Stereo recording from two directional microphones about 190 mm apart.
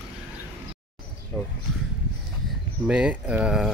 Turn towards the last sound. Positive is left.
turn(degrees=-5)  # may be behind; listen again after turning